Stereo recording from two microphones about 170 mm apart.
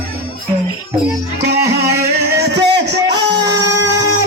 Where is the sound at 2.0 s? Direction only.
75° right (ahead or behind); by 3.2 s 90° right.